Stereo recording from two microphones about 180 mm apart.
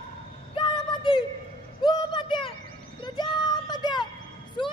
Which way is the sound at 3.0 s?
25° left (ahead or behind).